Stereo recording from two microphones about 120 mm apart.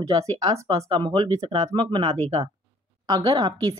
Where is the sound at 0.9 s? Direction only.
45° right (ahead or behind).